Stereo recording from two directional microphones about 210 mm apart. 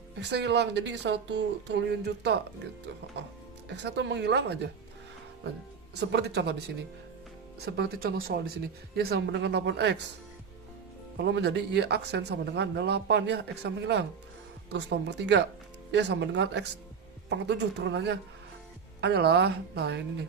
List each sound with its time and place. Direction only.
0.2 s speech: 55° right (ahead or behind)
3.7 s speech: 55° right (ahead or behind)
6.0 s speech: 55° right (ahead or behind)
11.2 s speech: 55° right (ahead or behind)